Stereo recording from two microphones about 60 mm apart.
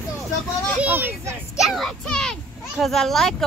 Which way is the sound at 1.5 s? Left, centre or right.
Centre.